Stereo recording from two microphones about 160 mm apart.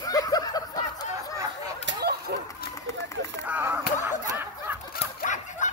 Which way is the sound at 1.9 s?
80° right.